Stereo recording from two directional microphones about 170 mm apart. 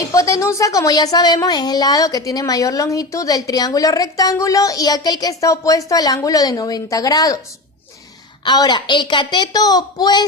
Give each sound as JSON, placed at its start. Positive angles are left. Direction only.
{"t": 0.1, "sound": "speech", "side_deg": 20}
{"t": 8.4, "sound": "speech", "side_deg": 25}